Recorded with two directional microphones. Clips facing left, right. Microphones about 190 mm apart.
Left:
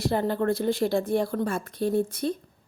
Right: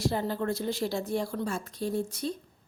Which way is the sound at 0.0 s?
60° left (ahead or behind).